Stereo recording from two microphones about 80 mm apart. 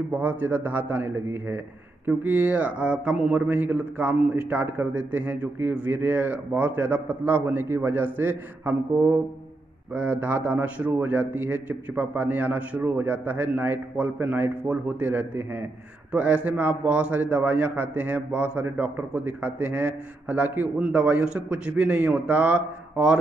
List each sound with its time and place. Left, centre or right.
0.1 s a man's voice: right
9.9 s a man's voice: right